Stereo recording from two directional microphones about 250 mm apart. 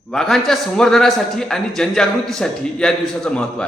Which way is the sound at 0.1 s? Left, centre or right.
Centre.